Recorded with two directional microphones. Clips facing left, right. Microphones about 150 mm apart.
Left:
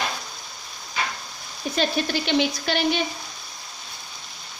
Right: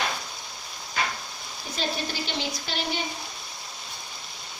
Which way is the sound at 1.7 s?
70° left (ahead or behind).